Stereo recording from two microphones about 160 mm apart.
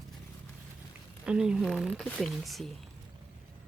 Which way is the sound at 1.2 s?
5° right (ahead or behind).